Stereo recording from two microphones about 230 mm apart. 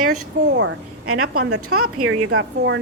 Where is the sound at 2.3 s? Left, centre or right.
Right.